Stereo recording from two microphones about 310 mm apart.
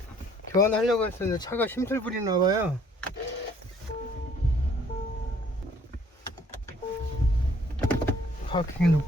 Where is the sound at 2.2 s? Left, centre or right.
Centre.